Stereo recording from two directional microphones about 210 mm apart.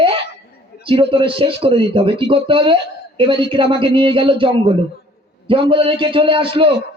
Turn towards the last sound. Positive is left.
turn(degrees=-25)  # may be behind; listen again after turning